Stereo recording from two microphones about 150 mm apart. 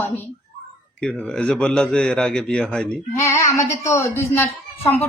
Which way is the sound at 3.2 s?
20° left (ahead or behind).